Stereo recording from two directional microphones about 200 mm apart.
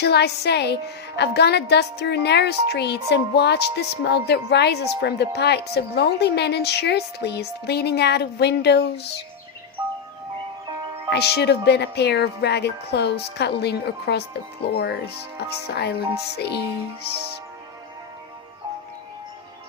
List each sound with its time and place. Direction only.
0.0 s a woman's voice: 55° left (ahead or behind)
11.1 s a woman's voice: 55° left (ahead or behind)